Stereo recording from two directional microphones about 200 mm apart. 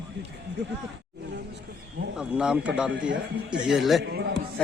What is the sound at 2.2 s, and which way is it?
Speech, 5° right (ahead or behind).